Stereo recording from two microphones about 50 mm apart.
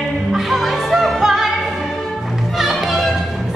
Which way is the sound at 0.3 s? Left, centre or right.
Centre.